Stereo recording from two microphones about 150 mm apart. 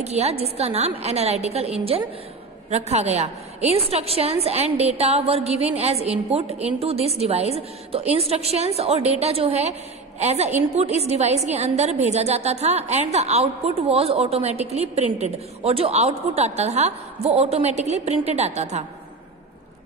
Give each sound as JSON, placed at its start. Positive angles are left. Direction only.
{"t": 0.0, "sound": "a woman's voice", "side_deg": -45}